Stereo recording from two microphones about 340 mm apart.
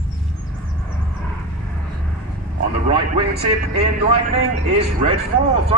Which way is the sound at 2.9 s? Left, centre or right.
Right.